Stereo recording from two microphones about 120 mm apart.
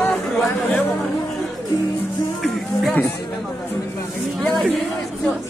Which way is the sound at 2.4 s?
5° left (ahead or behind).